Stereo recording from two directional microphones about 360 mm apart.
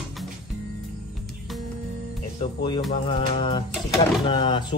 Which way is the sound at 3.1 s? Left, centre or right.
Centre.